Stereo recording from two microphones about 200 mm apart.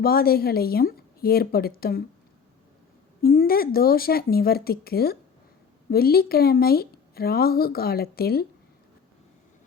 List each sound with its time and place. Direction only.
0.0 s speech: 50° left (ahead or behind)
3.2 s speech: 45° left (ahead or behind)